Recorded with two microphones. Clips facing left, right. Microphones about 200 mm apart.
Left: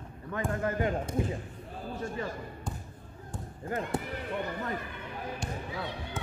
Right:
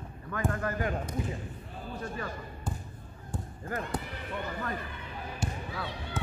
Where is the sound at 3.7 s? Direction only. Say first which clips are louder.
Left 2 dB; 20° left (ahead or behind).